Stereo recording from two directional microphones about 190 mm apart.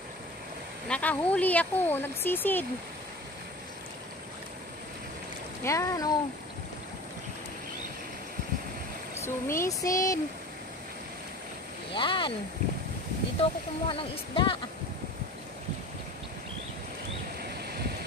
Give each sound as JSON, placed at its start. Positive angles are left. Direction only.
{"t": 0.8, "sound": "speech", "side_deg": 5}
{"t": 5.6, "sound": "speech", "side_deg": 15}
{"t": 9.2, "sound": "speech", "side_deg": 15}
{"t": 11.9, "sound": "speech", "side_deg": 25}
{"t": 13.4, "sound": "speech", "side_deg": 30}